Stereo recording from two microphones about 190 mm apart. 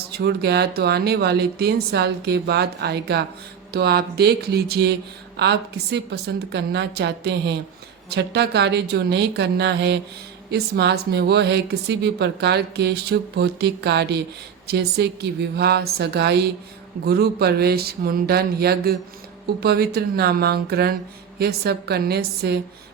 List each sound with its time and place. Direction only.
0.1 s speech: 60° right (ahead or behind)